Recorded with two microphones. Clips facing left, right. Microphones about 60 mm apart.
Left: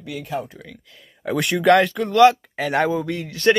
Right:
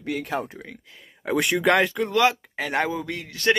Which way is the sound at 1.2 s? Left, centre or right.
Centre.